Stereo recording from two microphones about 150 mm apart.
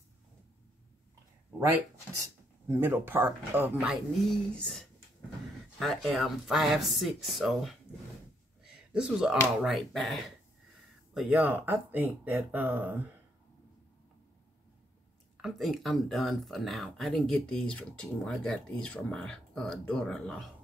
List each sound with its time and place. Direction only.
2.7 s speech: 15° right (ahead or behind)
4.6 s speech: 5° left (ahead or behind)
8.6 s a sound: 5° right (ahead or behind)
9.6 s speech: centre (ahead or behind)
11.1 s speech: 10° right (ahead or behind)
15.4 s speech: centre (ahead or behind)